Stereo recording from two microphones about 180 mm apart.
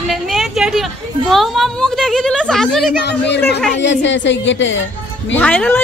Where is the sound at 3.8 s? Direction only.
90° left.